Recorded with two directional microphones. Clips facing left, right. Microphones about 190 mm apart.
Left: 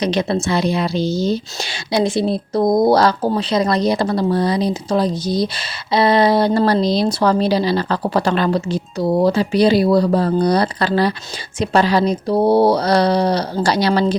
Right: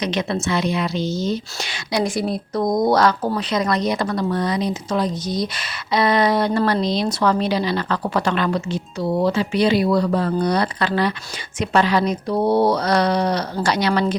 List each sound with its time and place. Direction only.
0.0 s a woman's voice: 35° left (ahead or behind)